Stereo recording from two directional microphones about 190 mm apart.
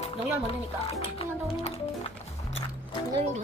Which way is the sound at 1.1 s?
30° left (ahead or behind).